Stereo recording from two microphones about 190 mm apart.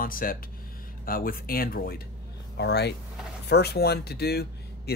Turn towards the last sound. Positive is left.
turn(degrees=55)  # may be behind; listen again after turning